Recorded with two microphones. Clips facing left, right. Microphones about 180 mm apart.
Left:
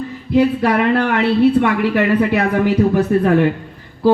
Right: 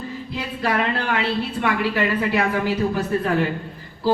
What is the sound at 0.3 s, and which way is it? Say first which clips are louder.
Speech: left 10 dB; 60° left (ahead or behind).